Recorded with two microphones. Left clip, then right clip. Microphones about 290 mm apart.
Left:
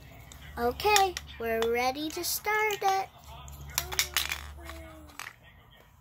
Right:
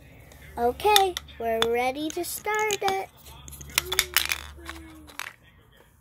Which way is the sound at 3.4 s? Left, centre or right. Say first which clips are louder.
Right 8 dB; right.